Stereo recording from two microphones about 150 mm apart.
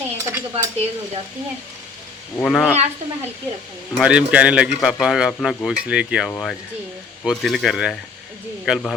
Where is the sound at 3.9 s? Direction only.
5° right (ahead or behind).